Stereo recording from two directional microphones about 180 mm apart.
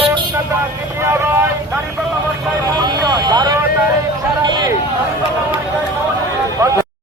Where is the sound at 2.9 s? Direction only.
20° right (ahead or behind).